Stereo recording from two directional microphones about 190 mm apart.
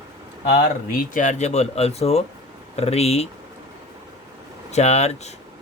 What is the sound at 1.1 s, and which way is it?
Speech, 40° left (ahead or behind).